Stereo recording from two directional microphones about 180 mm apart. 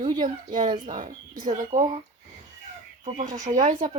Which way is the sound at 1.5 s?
45° right (ahead or behind).